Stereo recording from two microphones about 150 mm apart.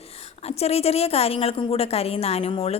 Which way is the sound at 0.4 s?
45° left (ahead or behind).